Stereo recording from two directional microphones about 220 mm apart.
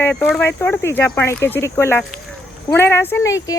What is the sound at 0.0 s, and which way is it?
Speech, 10° left (ahead or behind).